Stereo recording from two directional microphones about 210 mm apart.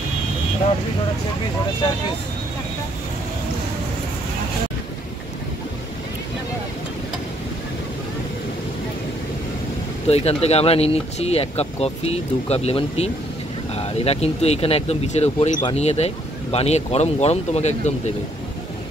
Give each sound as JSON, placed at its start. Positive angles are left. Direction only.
{"t": 10.0, "sound": "speech", "side_deg": 30}